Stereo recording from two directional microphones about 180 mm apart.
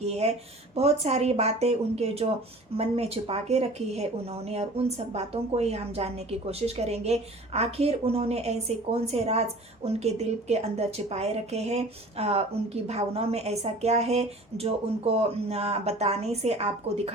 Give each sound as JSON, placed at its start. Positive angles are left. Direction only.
{"t": 0.0, "sound": "a woman's voice", "side_deg": -35}